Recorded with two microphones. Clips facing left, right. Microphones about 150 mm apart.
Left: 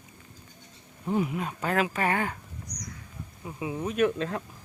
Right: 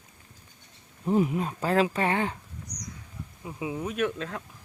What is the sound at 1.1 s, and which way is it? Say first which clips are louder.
Speech: right 3 dB; 35° right (ahead or behind).